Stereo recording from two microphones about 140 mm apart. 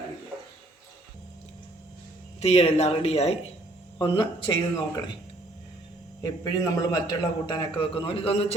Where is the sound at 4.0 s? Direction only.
35° left (ahead or behind).